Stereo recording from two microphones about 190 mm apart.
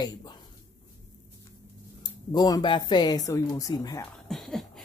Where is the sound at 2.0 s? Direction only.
20° left (ahead or behind).